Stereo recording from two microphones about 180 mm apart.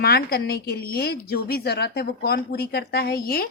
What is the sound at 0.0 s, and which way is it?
A woman's voice, 60° left (ahead or behind).